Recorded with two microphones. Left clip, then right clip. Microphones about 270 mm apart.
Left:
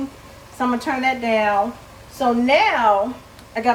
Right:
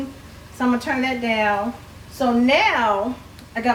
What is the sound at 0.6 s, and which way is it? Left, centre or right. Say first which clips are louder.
Speech: left 1 dB; centre.